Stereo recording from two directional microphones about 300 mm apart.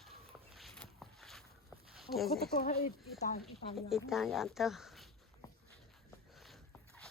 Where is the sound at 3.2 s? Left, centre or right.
Left.